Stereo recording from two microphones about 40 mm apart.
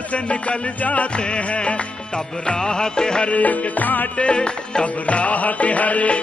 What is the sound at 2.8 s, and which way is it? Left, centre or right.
Music, centre.